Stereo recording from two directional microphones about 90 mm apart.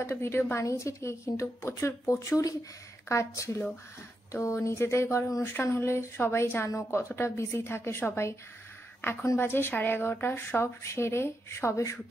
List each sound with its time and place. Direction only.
0.0 s a woman's voice: 25° left (ahead or behind)